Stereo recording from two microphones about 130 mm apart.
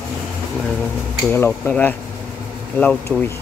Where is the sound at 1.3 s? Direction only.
15° left (ahead or behind).